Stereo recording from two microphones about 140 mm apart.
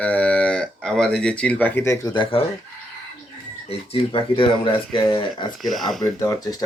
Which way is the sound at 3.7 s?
45° left (ahead or behind).